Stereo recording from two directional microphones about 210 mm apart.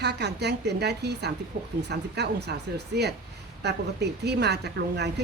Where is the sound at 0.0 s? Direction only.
55° right (ahead or behind).